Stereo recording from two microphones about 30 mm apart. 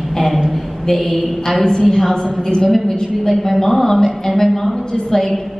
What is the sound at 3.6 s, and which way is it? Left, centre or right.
A woman's voice, centre.